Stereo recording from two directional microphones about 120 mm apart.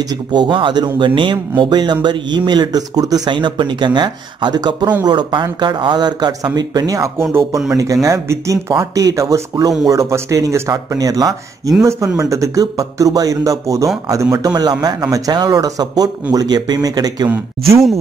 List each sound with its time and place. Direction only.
0.3 s speech: 40° right (ahead or behind)